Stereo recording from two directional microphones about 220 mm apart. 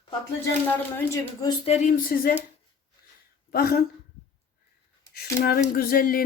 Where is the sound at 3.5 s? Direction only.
45° left (ahead or behind).